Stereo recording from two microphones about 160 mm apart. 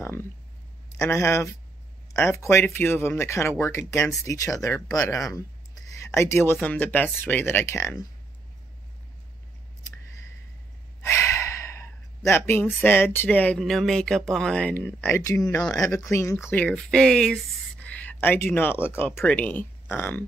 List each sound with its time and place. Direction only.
0.0 s a sound: 15° left (ahead or behind)
0.9 s speech: 20° left (ahead or behind)
11.0 s speech: 15° left (ahead or behind)